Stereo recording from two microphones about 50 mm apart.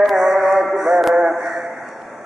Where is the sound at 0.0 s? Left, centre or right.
Centre.